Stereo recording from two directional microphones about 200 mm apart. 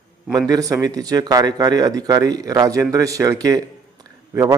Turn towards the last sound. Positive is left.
turn(degrees=-15)  # may be behind; listen again after turning